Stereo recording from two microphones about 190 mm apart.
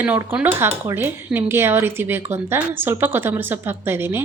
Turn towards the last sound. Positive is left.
turn(degrees=-10)  # may be behind; listen again after turning